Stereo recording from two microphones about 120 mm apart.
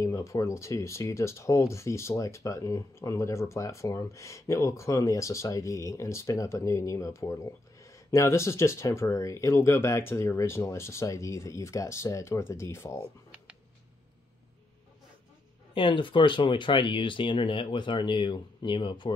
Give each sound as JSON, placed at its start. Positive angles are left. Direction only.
{"t": 0.0, "sound": "speech", "side_deg": 25}
{"t": 15.7, "sound": "speech", "side_deg": 45}